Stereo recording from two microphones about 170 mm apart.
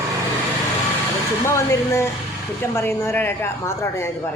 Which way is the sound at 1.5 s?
15° left (ahead or behind).